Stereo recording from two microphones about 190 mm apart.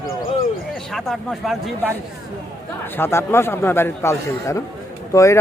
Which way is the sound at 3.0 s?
15° left (ahead or behind).